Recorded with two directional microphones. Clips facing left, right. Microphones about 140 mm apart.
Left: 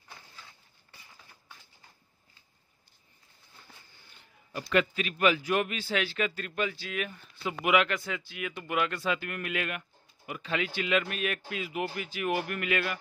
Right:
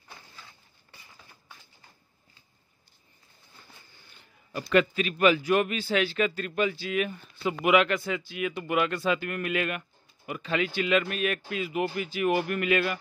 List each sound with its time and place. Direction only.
4.7 s speech: 35° right (ahead or behind)
6.5 s speech: 15° right (ahead or behind)
7.4 s speech: 30° right (ahead or behind)
9.0 s speech: 35° right (ahead or behind)